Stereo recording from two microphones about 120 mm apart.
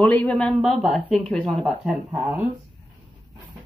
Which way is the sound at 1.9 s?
15° right (ahead or behind).